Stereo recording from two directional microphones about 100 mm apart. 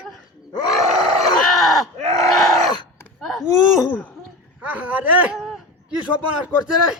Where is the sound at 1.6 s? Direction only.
Centre (ahead or behind).